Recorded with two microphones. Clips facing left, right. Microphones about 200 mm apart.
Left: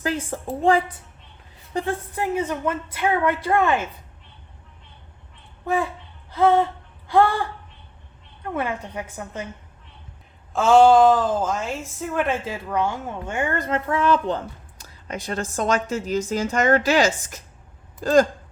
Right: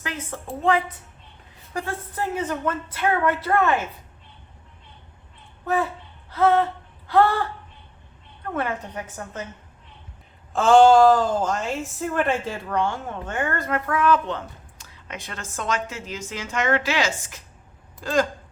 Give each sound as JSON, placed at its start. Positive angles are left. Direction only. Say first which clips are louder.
{"t": 0.0, "sound": "a woman's voice", "louder": "left 7 dB", "side_deg": 30}
{"t": 1.7, "sound": "a woman's voice", "louder": "left 4 dB", "side_deg": 20}
{"t": 5.6, "sound": "a woman's voice", "louder": "even", "side_deg": 15}
{"t": 8.5, "sound": "a woman's voice", "louder": "left 1 dB", "side_deg": 10}
{"t": 10.5, "sound": "a woman's voice", "louder": "even", "side_deg": 0}